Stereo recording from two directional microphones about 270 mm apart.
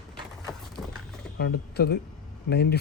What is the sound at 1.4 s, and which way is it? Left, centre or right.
Speech, left.